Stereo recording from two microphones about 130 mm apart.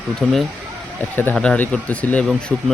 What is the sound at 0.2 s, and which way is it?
Speech, 5° left (ahead or behind).